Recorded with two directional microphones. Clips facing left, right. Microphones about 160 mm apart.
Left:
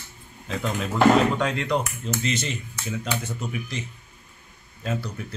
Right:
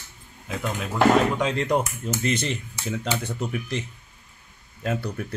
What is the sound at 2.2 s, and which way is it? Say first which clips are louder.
Speech: right 5 dB; 55° right (ahead or behind).